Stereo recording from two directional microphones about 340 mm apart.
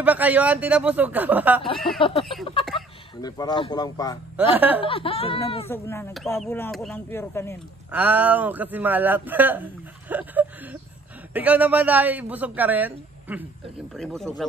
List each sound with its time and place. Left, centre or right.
0.0 s a man's voice: centre
2.0 s speech: centre
3.2 s speech: centre
4.6 s a man's voice: centre
4.8 s speech: centre
7.9 s a man's voice: centre
10.0 s a sound: centre
11.3 s a man's voice: centre